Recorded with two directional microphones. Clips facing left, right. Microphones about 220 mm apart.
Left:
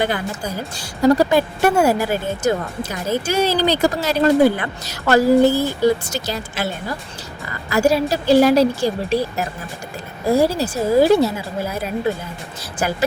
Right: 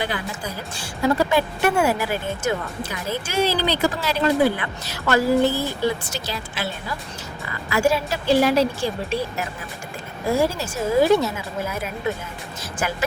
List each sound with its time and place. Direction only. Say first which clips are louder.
0.0 s a woman's voice: left 5 dB; 45° left (ahead or behind)